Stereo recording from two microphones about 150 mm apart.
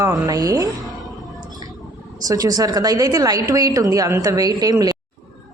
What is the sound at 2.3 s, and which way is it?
A woman's voice, 25° right (ahead or behind).